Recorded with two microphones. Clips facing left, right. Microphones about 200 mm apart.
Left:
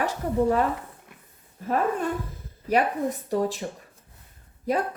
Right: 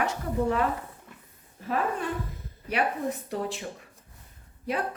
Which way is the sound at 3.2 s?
40° left (ahead or behind).